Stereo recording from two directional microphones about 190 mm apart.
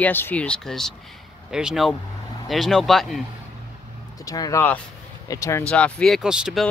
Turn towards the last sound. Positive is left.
turn(degrees=0)  # may be behind; listen again after turning